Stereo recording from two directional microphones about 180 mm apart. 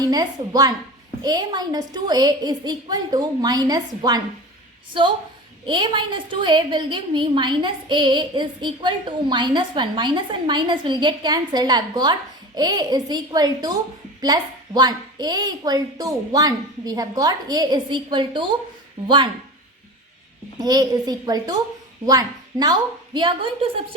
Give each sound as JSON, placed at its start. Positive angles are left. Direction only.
{"t": 0.0, "sound": "a woman's voice", "side_deg": -20}
{"t": 5.6, "sound": "a woman's voice", "side_deg": -25}
{"t": 20.6, "sound": "a woman's voice", "side_deg": -20}